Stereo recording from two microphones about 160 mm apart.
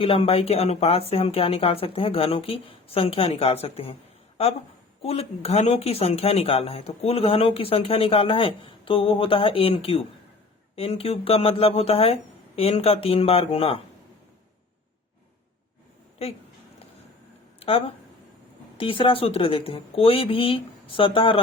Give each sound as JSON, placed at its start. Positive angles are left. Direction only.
{"t": 0.0, "sound": "speech", "side_deg": 35}
{"t": 5.0, "sound": "speech", "side_deg": 40}
{"t": 17.6, "sound": "speech", "side_deg": 35}